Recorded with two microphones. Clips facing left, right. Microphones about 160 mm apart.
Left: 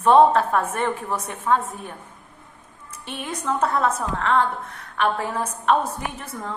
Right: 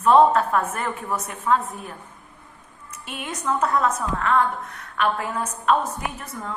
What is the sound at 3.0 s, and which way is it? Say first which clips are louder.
A woman's voice: left 1 dB; 30° left (ahead or behind).